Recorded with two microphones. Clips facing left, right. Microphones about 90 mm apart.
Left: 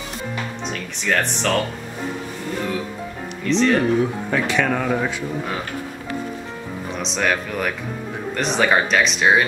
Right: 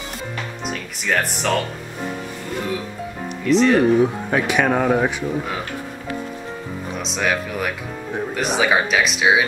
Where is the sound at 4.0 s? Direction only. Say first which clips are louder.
Right 2 dB; 15° right (ahead or behind).